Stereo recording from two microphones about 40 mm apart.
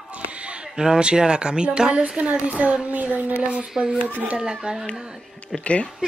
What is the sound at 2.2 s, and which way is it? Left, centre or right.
A woman's voice, right.